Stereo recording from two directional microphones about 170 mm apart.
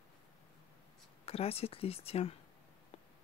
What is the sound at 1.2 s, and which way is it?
Speech, 35° left (ahead or behind).